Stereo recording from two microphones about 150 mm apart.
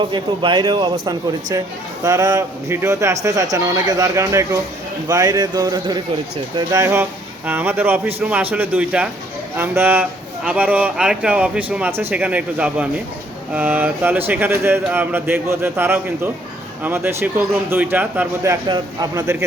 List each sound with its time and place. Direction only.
0.0 s a man's voice: 30° right (ahead or behind)